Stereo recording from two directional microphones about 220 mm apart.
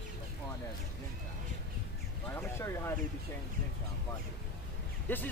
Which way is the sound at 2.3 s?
10° left (ahead or behind).